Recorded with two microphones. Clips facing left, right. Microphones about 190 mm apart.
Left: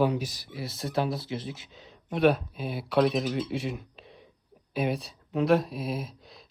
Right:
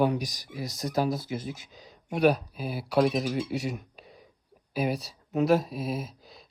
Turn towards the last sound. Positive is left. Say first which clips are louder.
# even
turn(degrees=0)  # may be behind; listen again after turning